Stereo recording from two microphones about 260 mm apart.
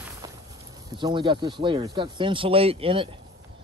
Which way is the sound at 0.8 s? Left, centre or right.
Centre.